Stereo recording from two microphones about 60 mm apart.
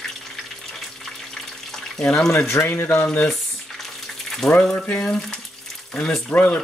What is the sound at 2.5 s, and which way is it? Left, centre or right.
Speech, left.